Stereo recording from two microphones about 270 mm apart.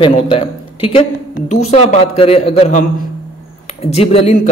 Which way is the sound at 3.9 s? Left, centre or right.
Left.